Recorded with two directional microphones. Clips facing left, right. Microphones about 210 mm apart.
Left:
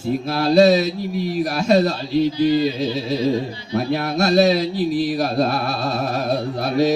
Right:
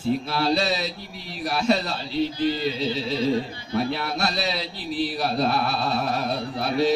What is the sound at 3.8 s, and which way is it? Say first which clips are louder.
A man's voice: left 5 dB; 45° left (ahead or behind).